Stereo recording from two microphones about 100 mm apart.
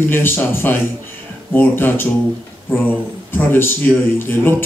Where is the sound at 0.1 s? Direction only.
20° left (ahead or behind).